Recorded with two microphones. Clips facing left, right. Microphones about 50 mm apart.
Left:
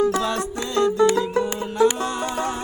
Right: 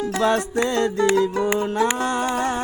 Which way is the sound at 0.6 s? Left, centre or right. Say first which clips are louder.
Left 4 dB; right.